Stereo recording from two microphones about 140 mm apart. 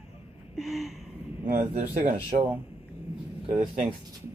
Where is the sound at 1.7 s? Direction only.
65° right (ahead or behind).